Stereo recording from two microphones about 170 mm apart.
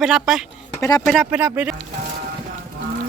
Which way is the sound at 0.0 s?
Centre (ahead or behind).